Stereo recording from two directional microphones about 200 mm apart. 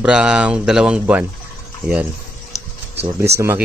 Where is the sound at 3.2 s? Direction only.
15° right (ahead or behind).